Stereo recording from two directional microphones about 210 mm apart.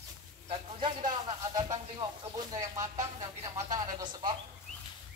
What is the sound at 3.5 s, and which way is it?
Speech, 20° right (ahead or behind).